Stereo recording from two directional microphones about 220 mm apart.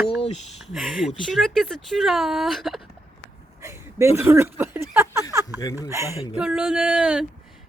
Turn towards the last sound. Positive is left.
turn(degrees=-5)  # may be behind; listen again after turning